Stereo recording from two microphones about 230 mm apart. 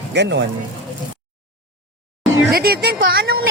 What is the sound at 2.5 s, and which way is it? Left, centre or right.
Speech, right.